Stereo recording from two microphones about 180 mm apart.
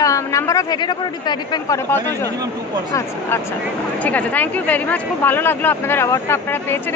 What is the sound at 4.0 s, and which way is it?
A woman's voice, 10° left (ahead or behind).